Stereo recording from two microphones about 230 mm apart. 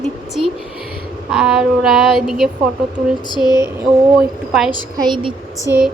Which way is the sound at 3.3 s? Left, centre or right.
Centre.